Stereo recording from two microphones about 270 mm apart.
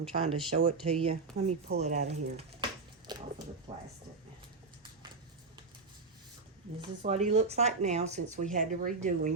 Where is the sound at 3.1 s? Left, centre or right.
Centre.